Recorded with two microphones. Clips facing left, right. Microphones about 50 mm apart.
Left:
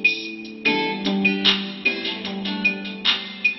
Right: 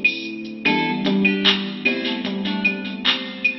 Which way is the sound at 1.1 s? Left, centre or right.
Centre.